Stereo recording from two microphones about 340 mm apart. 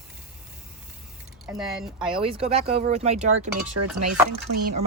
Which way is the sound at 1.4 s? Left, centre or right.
Centre.